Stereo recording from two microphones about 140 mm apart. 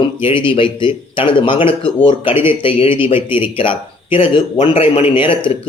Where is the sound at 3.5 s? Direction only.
40° left (ahead or behind).